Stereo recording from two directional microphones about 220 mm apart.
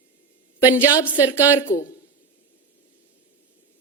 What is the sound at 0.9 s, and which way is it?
A woman's voice, 20° left (ahead or behind).